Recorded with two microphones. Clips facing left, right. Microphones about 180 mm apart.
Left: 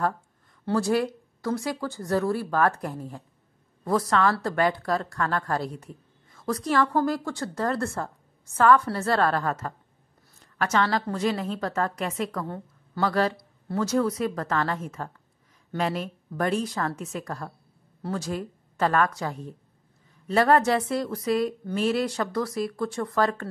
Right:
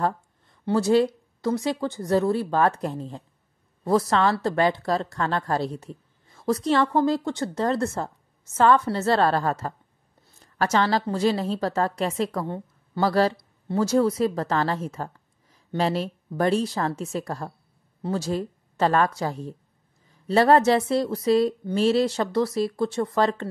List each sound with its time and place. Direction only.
0.7 s a woman's voice: 20° right (ahead or behind)